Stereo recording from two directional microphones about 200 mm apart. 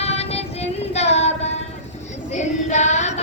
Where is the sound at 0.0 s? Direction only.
30° left (ahead or behind).